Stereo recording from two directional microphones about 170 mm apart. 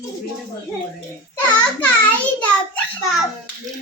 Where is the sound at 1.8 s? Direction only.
10° left (ahead or behind).